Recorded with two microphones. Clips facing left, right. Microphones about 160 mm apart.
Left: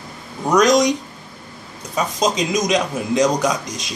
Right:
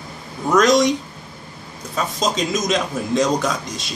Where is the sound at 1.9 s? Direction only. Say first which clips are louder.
Left 2 dB; 15° left (ahead or behind).